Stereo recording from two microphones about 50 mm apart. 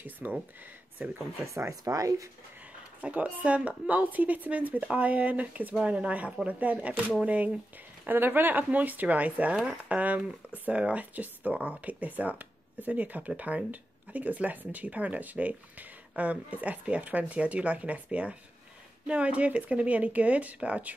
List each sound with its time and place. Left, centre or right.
0.0 s speech: right
1.5 s speech: right
3.0 s speech: right
8.1 s speech: right